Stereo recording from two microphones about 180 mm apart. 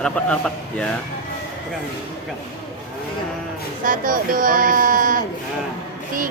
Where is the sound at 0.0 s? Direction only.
5° left (ahead or behind).